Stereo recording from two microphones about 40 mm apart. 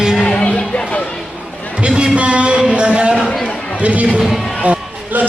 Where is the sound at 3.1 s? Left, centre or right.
Centre.